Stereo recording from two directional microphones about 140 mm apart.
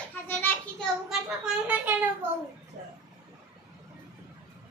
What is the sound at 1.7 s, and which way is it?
Speech, 10° right (ahead or behind).